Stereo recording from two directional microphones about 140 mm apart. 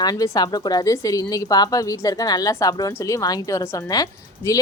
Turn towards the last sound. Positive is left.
turn(degrees=20)  # may be behind; listen again after turning